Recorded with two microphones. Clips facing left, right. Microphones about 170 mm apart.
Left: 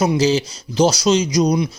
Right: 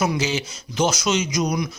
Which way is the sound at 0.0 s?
35° left (ahead or behind).